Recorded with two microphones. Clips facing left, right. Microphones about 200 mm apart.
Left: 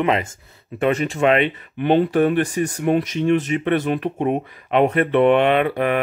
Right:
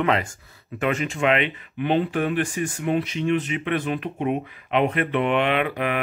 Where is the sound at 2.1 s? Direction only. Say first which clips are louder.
Left 6 dB; 40° left (ahead or behind).